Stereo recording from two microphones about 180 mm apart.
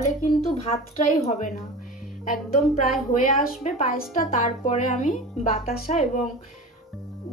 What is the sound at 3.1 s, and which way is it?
A woman's voice, 45° left (ahead or behind).